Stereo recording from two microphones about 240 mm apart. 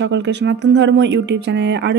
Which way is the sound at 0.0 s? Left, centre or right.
Right.